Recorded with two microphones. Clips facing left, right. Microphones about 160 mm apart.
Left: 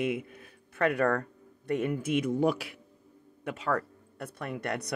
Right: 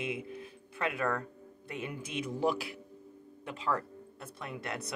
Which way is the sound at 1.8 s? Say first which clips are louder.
Left 7 dB; 55° left (ahead or behind).